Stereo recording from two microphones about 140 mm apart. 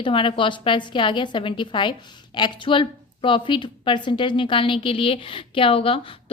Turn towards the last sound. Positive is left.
turn(degrees=40)  # may be behind; listen again after turning